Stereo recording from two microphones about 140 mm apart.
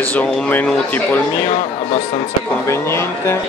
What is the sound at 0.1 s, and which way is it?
Speech, 10° left (ahead or behind).